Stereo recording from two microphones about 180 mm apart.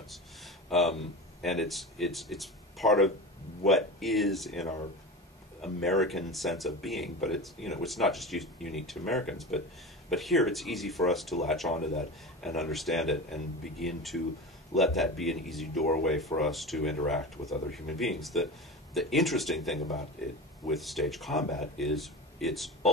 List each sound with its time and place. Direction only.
0.7 s speech: centre (ahead or behind)
11.7 s speech: 40° left (ahead or behind)
12.4 s speech: centre (ahead or behind)
15.7 s speech: 55° left (ahead or behind)
16.3 s speech: centre (ahead or behind)